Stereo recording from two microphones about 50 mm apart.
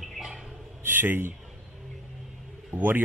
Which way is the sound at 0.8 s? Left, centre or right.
Right.